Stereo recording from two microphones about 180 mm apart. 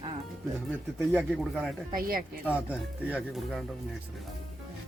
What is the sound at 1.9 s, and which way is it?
Speech, 55° right (ahead or behind).